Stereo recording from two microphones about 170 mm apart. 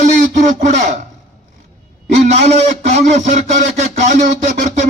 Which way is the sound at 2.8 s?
45° right (ahead or behind).